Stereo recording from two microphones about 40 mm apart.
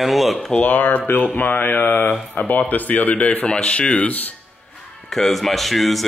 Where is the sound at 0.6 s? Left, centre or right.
Left.